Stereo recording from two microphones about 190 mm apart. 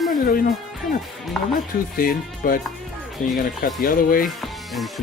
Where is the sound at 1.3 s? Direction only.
Centre (ahead or behind).